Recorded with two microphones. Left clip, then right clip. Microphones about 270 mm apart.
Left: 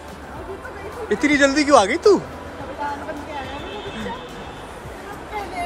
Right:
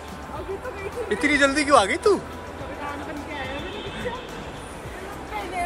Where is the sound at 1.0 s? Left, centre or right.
Centre.